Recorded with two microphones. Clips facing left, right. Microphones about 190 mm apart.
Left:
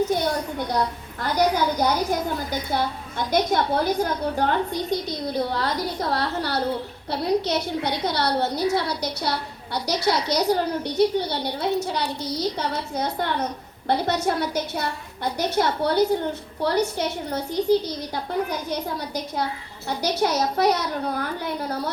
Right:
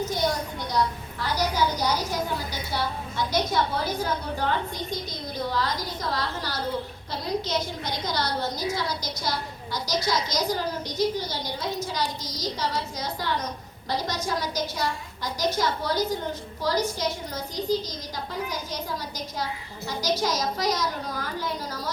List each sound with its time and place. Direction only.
0.1 s a woman's voice: 55° left (ahead or behind)